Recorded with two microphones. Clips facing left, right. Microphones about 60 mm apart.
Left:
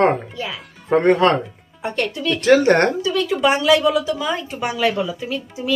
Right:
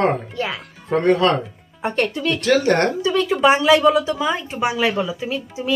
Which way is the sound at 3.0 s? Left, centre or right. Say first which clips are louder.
Right 2 dB; right.